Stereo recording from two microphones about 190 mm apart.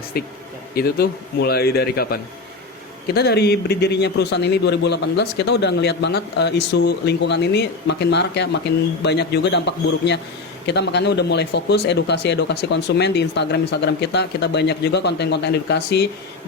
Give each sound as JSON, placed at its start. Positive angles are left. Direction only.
{"t": 0.1, "sound": "a man's voice", "side_deg": 55}
{"t": 3.2, "sound": "a man's voice", "side_deg": 60}